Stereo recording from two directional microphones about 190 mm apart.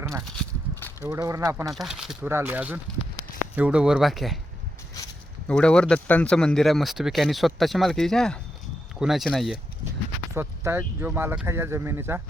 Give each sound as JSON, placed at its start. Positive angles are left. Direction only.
{"t": 0.0, "sound": "walk", "side_deg": -15}
{"t": 0.3, "sound": "walk", "side_deg": 5}
{"t": 1.0, "sound": "speech", "side_deg": -15}
{"t": 1.7, "sound": "speech", "side_deg": 0}
{"t": 5.5, "sound": "speech", "side_deg": 5}
{"t": 10.3, "sound": "speech", "side_deg": -10}